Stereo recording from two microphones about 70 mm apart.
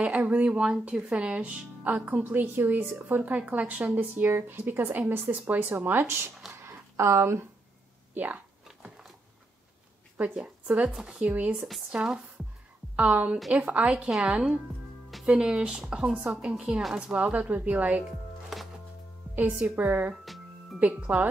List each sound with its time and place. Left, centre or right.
0.0 s speech: centre; by 6.3 s right
6.5 s a sound: right
8.1 s speech: right
8.6 s dog: centre
10.1 s a woman's voice: centre
15.2 s speech: centre
19.3 s speech: right